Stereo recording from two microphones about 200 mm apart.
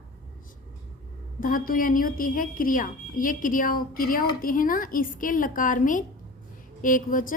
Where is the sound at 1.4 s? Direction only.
45° left (ahead or behind).